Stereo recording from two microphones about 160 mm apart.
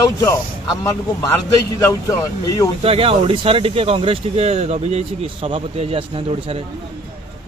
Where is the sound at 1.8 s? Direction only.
20° left (ahead or behind).